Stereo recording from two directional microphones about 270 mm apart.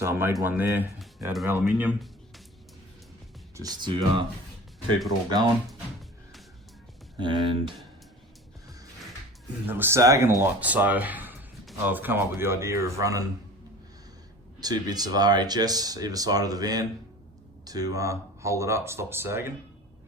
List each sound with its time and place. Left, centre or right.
0.0 s speech: centre
3.5 s speech: centre
7.2 s speech: centre
9.6 s speech: centre
14.6 s speech: centre